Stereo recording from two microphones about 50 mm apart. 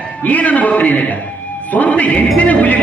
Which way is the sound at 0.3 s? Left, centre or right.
Left.